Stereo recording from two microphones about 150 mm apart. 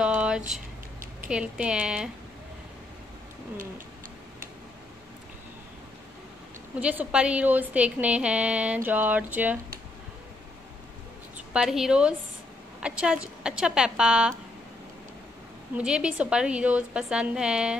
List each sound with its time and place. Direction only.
0.0 s a sound: 5° right (ahead or behind)
1.3 s a woman's voice: 5° right (ahead or behind)
6.8 s a woman's voice: 10° right (ahead or behind)
11.3 s a woman's voice: 5° right (ahead or behind)
15.7 s a woman's voice: 5° right (ahead or behind)